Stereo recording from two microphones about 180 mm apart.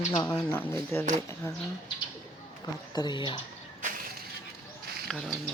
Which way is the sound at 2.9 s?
25° left (ahead or behind).